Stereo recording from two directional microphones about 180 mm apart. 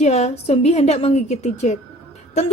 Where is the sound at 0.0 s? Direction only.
35° left (ahead or behind).